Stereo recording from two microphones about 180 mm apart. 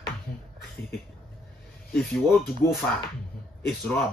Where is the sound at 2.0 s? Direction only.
Centre (ahead or behind).